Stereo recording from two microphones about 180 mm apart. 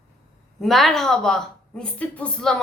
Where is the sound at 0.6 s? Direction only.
Centre (ahead or behind).